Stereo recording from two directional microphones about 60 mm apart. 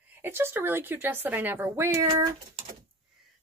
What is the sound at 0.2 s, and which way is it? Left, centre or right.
Speech, right.